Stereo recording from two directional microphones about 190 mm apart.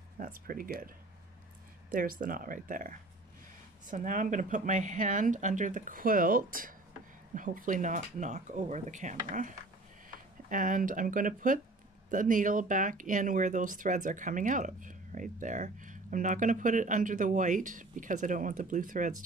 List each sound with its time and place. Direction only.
0.2 s speech: 50° right (ahead or behind)
2.0 s speech: 45° right (ahead or behind)